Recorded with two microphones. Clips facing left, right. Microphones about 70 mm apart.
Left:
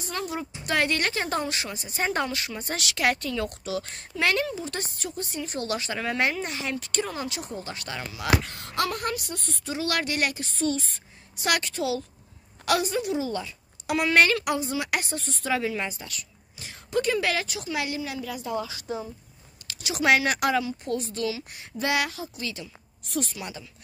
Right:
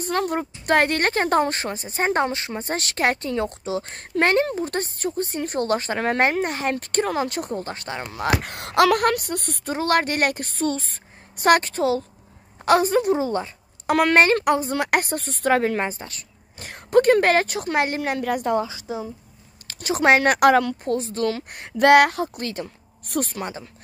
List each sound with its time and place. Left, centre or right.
0.0 s a woman's voice: right
3.9 s a woman's voice: right
7.7 s a woman's voice: right
8.2 s speech: right
9.8 s a woman's voice: right
16.6 s speech: right
18.9 s speech: right
19.7 s speech: right
20.8 s speech: right